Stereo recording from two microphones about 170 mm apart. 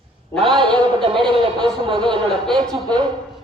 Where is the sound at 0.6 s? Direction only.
30° right (ahead or behind).